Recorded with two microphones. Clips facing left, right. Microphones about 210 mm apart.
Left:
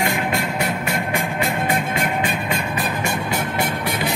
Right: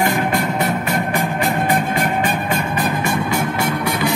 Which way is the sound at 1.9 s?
45° right (ahead or behind).